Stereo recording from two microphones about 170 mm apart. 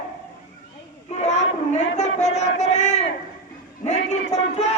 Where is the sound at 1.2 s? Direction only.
40° left (ahead or behind).